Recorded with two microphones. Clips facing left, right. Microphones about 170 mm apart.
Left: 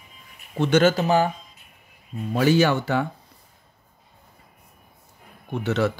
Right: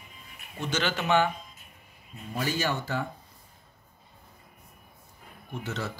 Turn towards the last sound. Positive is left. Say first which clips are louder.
# left 11 dB
turn(degrees=70)  # may be behind; listen again after turning